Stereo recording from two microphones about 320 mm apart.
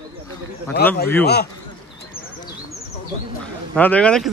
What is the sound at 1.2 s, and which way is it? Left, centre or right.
Speech, left.